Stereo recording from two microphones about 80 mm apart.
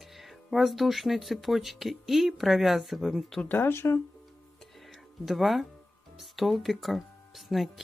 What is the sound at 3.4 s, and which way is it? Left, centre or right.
Speech, left.